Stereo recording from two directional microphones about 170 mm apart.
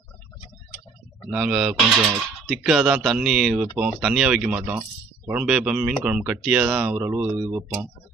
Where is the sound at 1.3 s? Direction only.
5° right (ahead or behind).